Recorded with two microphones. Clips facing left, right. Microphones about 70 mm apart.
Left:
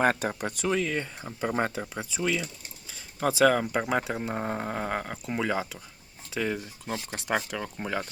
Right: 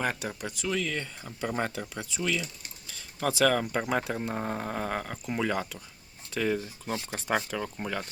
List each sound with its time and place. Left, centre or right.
0.0 s speech: left
0.7 s speech: left
4.3 s a sound: centre
6.3 s speech: centre